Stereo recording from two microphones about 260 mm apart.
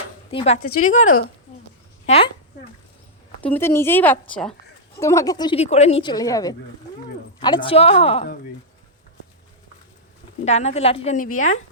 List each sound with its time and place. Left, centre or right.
0.3 s a woman's voice: left
3.4 s a woman's voice: centre; by 8.4 s left
10.4 s a woman's voice: left